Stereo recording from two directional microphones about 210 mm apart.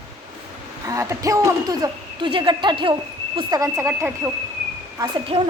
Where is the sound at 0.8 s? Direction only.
15° right (ahead or behind).